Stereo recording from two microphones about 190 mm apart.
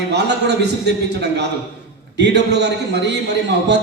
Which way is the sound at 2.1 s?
65° right (ahead or behind).